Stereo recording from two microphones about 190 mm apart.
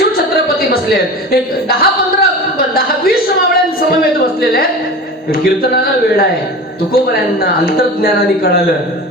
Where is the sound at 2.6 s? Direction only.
50° left (ahead or behind).